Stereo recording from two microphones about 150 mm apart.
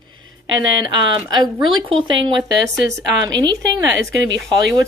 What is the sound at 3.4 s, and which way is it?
Speech, 30° right (ahead or behind).